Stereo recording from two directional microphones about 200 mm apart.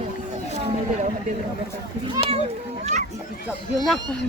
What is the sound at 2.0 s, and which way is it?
Speech, 25° right (ahead or behind).